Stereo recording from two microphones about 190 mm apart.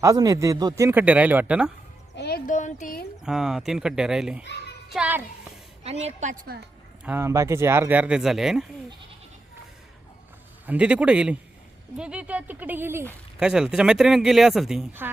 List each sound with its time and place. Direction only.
0.0 s speech: 20° right (ahead or behind)
2.1 s music: 60° left (ahead or behind)
2.5 s speech: 40° left (ahead or behind)
3.2 s speech: 5° right (ahead or behind)
4.4 s a child's voice: 60° left (ahead or behind)
4.9 s a child's voice: 5° right (ahead or behind)
5.8 s a woman's voice: 35° right (ahead or behind)
7.0 s speech: 10° right (ahead or behind)
10.7 s speech: 5° right (ahead or behind)